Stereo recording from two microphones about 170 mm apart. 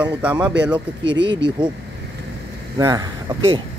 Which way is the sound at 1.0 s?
90° right.